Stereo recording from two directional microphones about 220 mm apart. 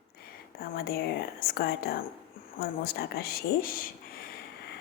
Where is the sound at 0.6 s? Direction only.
45° left (ahead or behind).